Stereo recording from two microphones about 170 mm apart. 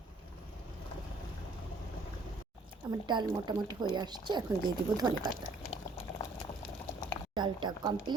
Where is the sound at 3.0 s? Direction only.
25° right (ahead or behind).